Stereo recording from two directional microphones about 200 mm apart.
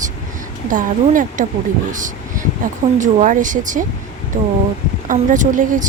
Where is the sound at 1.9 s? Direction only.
40° right (ahead or behind).